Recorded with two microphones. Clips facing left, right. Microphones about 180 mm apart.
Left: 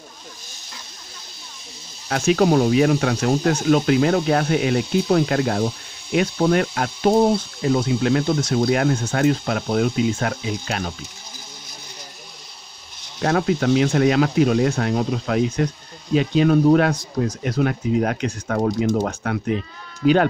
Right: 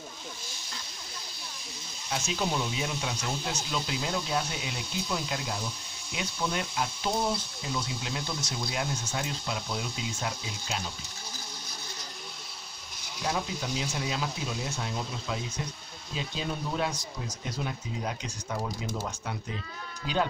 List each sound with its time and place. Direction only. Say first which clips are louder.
2.0 s speech: left 14 dB; 65° left (ahead or behind)
13.2 s speech: left 13 dB; 65° left (ahead or behind)